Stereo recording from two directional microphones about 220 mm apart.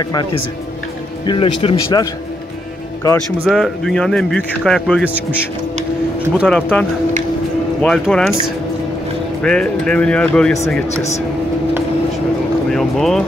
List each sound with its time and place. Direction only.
0.0 s speech: 20° left (ahead or behind)
3.4 s a man's voice: centre (ahead or behind)
6.3 s a man's voice: 5° left (ahead or behind)
9.4 s a man's voice: 5° left (ahead or behind)
12.7 s a man's voice: centre (ahead or behind)